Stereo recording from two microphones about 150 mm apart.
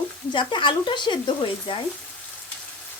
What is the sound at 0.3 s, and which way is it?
Speech, 30° left (ahead or behind).